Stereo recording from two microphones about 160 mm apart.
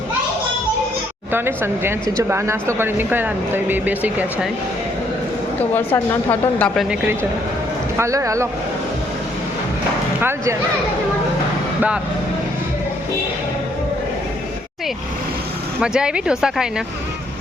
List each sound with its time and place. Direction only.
1.3 s speech: 15° right (ahead or behind)
5.7 s a woman's voice: 10° left (ahead or behind)
6.7 s speech: 10° right (ahead or behind)
7.9 s speech: 20° right (ahead or behind)
10.2 s speech: 15° right (ahead or behind)
15.8 s speech: 5° right (ahead or behind)